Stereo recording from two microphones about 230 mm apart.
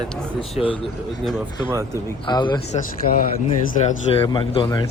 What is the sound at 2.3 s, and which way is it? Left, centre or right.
Speech, centre.